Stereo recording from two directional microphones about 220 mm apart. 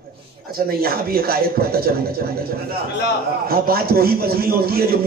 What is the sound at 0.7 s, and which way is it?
A man's voice, 45° right (ahead or behind).